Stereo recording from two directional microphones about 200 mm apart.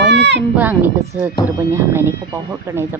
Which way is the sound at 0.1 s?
60° right (ahead or behind).